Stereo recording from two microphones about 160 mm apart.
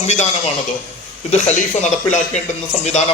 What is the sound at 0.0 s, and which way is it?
A man's voice, 45° left (ahead or behind).